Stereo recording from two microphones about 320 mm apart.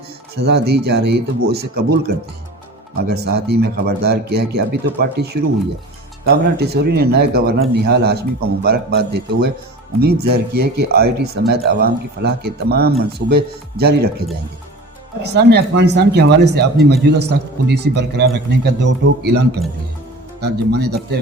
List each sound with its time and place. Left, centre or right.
0.3 s a man's voice: right
3.1 s a man's voice: right
15.2 s a man's voice: right